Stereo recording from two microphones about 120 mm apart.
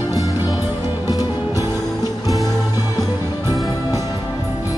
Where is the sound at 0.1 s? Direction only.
30° left (ahead or behind).